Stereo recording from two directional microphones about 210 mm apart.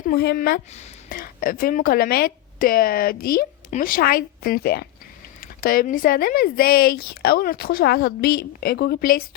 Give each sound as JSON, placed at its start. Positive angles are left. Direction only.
{"t": 0.1, "sound": "speech", "side_deg": 45}
{"t": 0.7, "sound": "speech", "side_deg": 30}
{"t": 1.2, "sound": "speech", "side_deg": 40}